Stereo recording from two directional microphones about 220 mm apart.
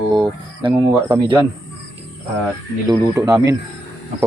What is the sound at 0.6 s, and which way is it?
Speech, 20° right (ahead or behind).